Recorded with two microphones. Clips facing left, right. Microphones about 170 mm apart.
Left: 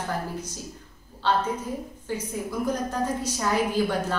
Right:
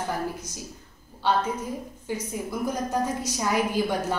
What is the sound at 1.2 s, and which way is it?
A woman's voice, 10° right (ahead or behind).